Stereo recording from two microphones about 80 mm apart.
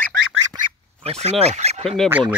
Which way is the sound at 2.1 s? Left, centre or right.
Centre.